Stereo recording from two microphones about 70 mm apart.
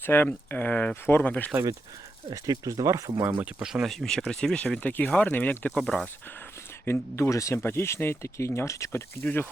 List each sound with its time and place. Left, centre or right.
0.0 s speech: left
2.3 s speech: right
3.6 s speech: centre
3.8 s speech: centre; by 5.7 s left
5.7 s speech: centre
6.8 s speech: left
7.3 s speech: left
7.5 s speech: left
9.2 s speech: left